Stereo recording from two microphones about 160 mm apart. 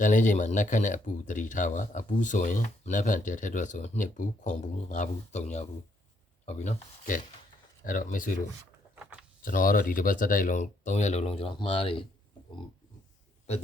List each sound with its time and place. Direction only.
0.0 s speech: 50° left (ahead or behind)
9.4 s speech: 60° left (ahead or behind); by 12.0 s 35° left (ahead or behind)